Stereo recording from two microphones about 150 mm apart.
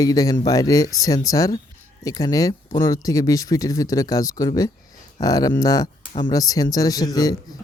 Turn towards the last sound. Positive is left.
turn(degrees=25)  # may be behind; listen again after turning